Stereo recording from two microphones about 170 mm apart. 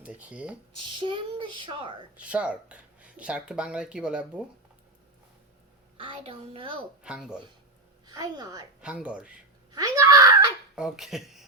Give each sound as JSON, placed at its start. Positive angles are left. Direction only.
{"t": 0.0, "sound": "speech", "side_deg": -10}
{"t": 0.8, "sound": "a woman's voice", "side_deg": -30}
{"t": 2.1, "sound": "speech", "side_deg": -5}
{"t": 6.0, "sound": "a child's voice", "side_deg": -35}
{"t": 7.0, "sound": "speech", "side_deg": -5}
{"t": 8.0, "sound": "a woman's voice", "side_deg": -25}
{"t": 8.8, "sound": "speech", "side_deg": -5}
{"t": 9.7, "sound": "wail", "side_deg": -20}
{"t": 10.8, "sound": "speech", "side_deg": 0}